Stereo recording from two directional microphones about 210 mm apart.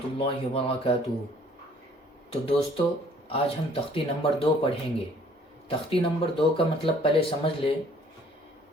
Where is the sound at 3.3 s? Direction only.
25° left (ahead or behind).